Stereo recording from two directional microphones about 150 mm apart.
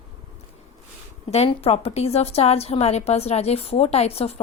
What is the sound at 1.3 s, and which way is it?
A woman's voice, 45° left (ahead or behind).